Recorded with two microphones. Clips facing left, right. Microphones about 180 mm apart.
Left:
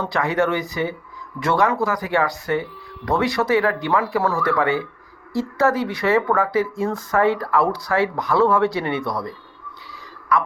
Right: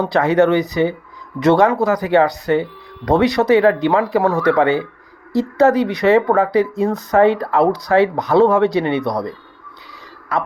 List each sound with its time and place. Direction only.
0.0 s speech: 25° right (ahead or behind)